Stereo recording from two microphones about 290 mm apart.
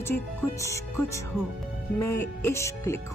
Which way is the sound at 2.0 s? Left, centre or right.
Left.